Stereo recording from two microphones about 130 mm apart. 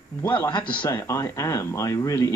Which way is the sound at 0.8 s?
25° left (ahead or behind).